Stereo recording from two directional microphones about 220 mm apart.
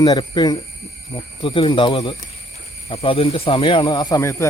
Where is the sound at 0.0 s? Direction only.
20° left (ahead or behind).